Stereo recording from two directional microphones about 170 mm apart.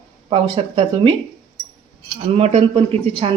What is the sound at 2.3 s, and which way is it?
Speech, 35° right (ahead or behind).